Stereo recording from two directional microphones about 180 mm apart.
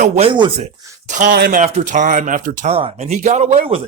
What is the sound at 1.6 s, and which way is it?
Speech, 45° right (ahead or behind).